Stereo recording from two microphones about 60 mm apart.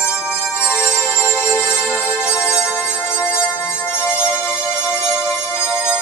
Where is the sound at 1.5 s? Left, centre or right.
Centre.